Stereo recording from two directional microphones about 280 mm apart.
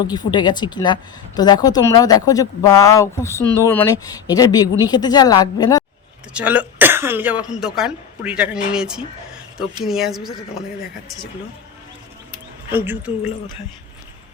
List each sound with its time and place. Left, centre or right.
0.0 s speech: centre
6.3 s speech: centre
12.7 s a woman's voice: centre